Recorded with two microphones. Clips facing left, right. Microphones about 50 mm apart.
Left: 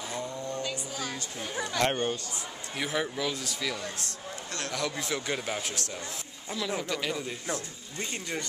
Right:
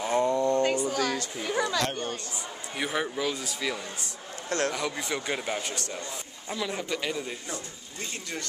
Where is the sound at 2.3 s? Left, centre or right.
Centre.